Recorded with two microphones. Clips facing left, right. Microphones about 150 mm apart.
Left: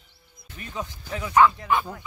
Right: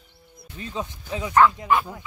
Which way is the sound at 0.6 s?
20° right (ahead or behind).